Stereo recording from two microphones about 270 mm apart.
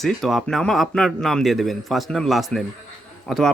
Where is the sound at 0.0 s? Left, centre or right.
Centre.